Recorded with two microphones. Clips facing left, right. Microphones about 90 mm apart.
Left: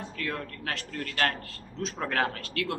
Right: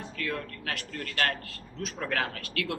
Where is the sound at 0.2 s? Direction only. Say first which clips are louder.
Right 1 dB; 30° left (ahead or behind).